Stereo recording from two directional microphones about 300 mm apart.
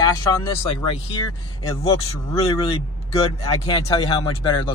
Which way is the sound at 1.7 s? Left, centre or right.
Centre.